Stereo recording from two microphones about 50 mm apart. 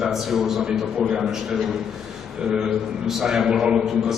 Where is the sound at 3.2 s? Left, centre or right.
Centre.